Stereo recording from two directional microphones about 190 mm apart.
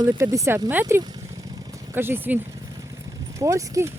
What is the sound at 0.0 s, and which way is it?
Speech, 15° right (ahead or behind).